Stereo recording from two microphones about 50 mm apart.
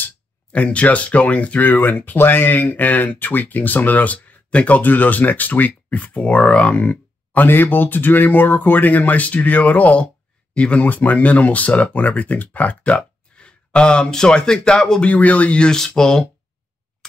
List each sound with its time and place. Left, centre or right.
0.5 s speech: left
15.0 s speech: left
15.7 s speech: centre